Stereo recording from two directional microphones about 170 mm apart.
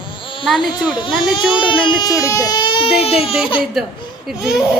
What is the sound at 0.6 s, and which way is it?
Speech, 25° left (ahead or behind).